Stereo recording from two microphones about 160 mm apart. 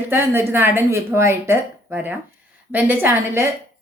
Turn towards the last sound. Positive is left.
turn(degrees=-15)  # may be behind; listen again after turning